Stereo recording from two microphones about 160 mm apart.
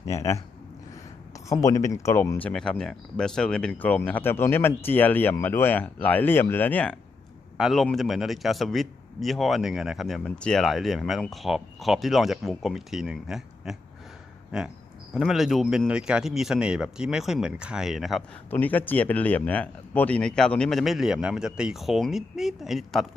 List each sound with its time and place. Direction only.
0.1 s speech: 20° left (ahead or behind)
1.5 s speech: 20° left (ahead or behind)
2.4 s a man's voice: 5° left (ahead or behind)
15.1 s a man's voice: centre (ahead or behind)
18.5 s a man's voice: 10° left (ahead or behind)